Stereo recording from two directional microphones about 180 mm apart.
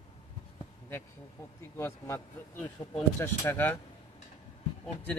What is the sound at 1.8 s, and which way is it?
Speech, 15° left (ahead or behind).